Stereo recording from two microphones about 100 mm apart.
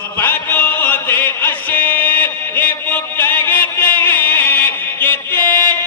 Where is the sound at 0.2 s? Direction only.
20° left (ahead or behind).